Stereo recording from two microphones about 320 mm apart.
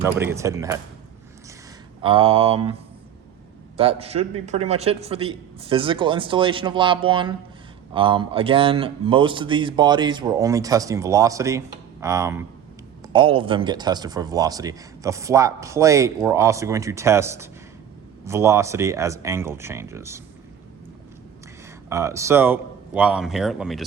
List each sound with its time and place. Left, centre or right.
0.0 s a man's voice: centre
2.0 s a man's voice: centre
3.8 s a man's voice: centre
21.8 s speech: centre